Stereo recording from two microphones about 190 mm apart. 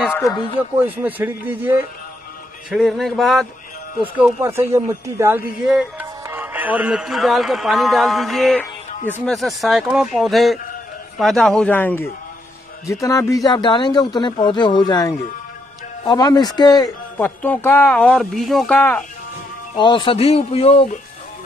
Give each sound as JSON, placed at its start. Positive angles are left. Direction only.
{"t": 0.1, "sound": "a sound", "side_deg": 15}
{"t": 0.8, "sound": "speech", "side_deg": -10}
{"t": 2.7, "sound": "speech", "side_deg": 0}
{"t": 4.4, "sound": "a man's voice", "side_deg": -15}
{"t": 17.4, "sound": "speech", "side_deg": 10}
{"t": 19.7, "sound": "a man's voice", "side_deg": 25}